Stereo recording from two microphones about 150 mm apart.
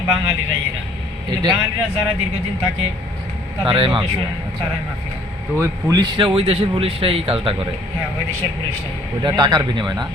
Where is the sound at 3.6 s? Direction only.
35° right (ahead or behind).